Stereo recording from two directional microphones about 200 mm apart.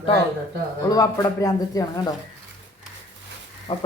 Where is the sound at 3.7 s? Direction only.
25° left (ahead or behind).